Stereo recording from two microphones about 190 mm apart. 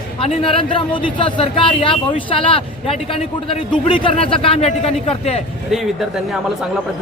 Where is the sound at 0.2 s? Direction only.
30° left (ahead or behind).